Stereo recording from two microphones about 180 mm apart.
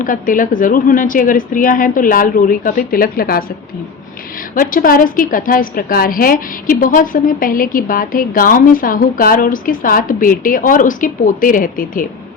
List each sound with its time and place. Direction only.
0.0 s a woman's voice: 50° left (ahead or behind)
4.5 s a woman's voice: 50° left (ahead or behind)